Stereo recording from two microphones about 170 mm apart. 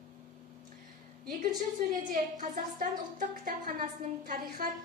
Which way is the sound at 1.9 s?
50° right (ahead or behind).